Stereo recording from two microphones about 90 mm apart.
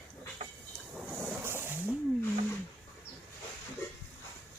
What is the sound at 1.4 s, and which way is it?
Wild animals, 25° right (ahead or behind).